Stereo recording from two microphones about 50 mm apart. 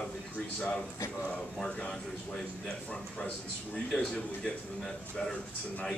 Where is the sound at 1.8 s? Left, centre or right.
Centre.